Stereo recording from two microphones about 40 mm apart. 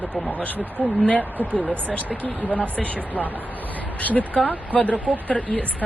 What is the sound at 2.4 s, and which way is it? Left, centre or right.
A man's voice, left.